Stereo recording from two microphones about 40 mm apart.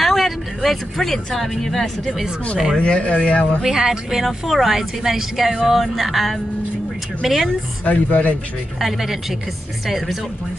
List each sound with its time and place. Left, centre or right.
0.0 s speech: centre
2.8 s speech: left
3.6 s speech: centre
4.2 s music: centre
4.7 s speech: centre
5.6 s music: centre
7.2 s speech: centre
7.8 s speech: left
8.7 s speech: centre
9.8 s music: centre